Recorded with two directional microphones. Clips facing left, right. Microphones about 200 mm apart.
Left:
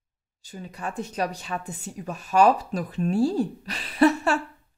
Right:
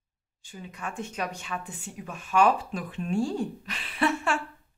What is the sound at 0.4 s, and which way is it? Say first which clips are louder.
Speech: left 4 dB; 40° left (ahead or behind).